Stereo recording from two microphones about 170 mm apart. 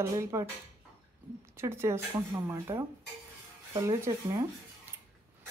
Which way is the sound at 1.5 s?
15° right (ahead or behind).